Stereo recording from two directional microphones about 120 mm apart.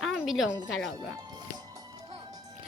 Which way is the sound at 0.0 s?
Centre (ahead or behind).